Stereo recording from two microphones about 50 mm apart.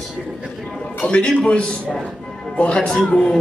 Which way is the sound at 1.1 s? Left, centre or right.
Left.